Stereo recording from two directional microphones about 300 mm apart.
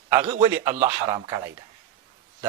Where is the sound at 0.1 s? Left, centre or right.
Centre.